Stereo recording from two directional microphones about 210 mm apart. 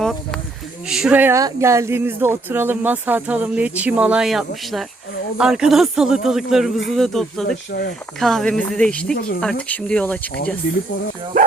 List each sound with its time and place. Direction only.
0.0 s a sound: centre (ahead or behind)
0.9 s a man's voice: centre (ahead or behind)
7.7 s speech: 50° left (ahead or behind)
8.2 s a man's voice: centre (ahead or behind)
9.1 s speech: 45° left (ahead or behind)
9.4 s speech: 5° left (ahead or behind)